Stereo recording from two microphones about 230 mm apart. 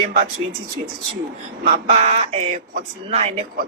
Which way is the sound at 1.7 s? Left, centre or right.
Right.